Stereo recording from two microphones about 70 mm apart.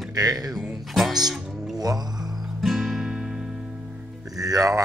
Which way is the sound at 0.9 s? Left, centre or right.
Centre.